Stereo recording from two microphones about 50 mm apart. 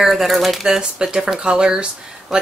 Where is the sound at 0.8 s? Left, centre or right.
Centre.